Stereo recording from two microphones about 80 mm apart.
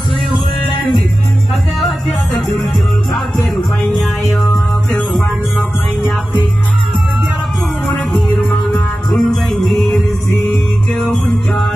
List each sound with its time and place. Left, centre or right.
4.0 s music: centre
5.6 s music: left
7.8 s music: centre
9.1 s music: centre